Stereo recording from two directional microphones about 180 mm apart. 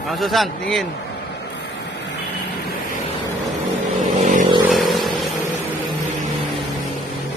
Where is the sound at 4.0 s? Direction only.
45° right (ahead or behind).